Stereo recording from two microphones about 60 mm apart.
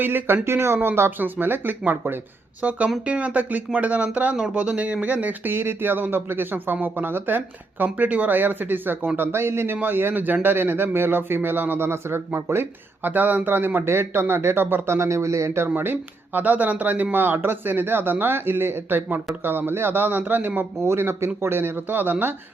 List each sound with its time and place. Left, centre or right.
0.0 s speech: right
0.4 s speech: right
2.6 s speech: right
7.9 s speech: right
13.1 s speech: right
14.9 s speech: right
20.8 s speech: right